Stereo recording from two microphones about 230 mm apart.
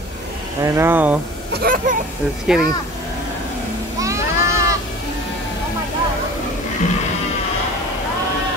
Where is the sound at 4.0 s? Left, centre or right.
Centre.